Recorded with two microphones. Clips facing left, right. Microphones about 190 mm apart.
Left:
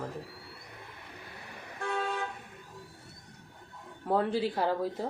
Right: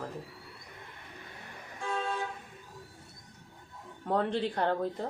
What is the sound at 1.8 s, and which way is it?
Toot, 65° left (ahead or behind).